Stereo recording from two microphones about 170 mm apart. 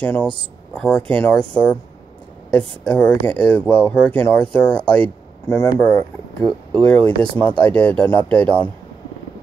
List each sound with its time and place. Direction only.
0.0 s speech: 10° left (ahead or behind)
2.8 s speech: 10° left (ahead or behind)
6.4 s speech: 30° right (ahead or behind)
7.6 s speech: 5° left (ahead or behind)